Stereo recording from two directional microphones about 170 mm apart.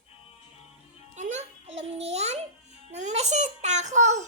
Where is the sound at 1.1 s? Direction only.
45° right (ahead or behind).